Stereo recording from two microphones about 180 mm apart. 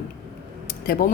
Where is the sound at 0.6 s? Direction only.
55° left (ahead or behind).